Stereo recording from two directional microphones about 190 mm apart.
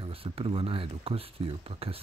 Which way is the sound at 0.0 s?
30° right (ahead or behind).